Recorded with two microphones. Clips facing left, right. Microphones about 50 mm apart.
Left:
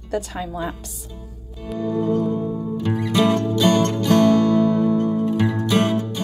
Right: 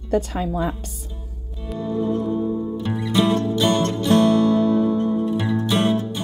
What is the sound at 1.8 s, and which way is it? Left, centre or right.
Music, left.